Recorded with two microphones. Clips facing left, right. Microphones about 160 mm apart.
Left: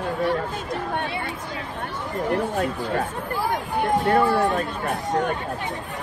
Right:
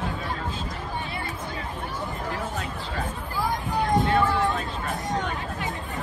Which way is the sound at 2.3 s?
65° left (ahead or behind).